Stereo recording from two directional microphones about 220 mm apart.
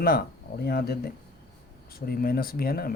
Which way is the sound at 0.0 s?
45° left (ahead or behind).